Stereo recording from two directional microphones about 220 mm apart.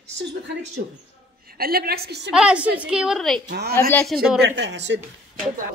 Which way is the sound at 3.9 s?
5° left (ahead or behind).